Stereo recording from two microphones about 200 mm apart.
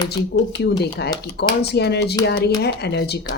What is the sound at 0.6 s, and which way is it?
Speech, 55° left (ahead or behind).